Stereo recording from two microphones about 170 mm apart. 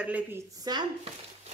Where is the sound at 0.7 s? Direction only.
25° right (ahead or behind).